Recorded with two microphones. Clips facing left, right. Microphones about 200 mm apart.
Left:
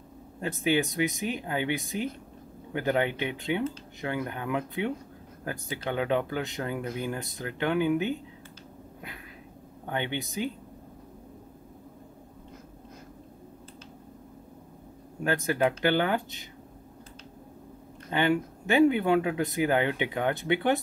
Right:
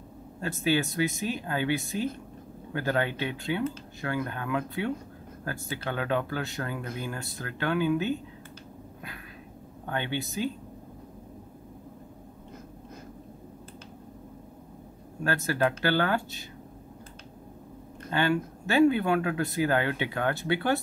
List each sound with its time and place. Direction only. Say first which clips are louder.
0.4 s speech: left 1 dB; 20° left (ahead or behind)
9.8 s speech: even; 20° left (ahead or behind)
15.2 s speech: left 1 dB; 15° left (ahead or behind)
18.1 s speech: left 1 dB; 20° left (ahead or behind)